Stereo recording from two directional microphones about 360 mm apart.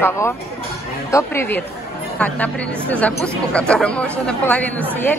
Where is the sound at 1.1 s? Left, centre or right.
Centre.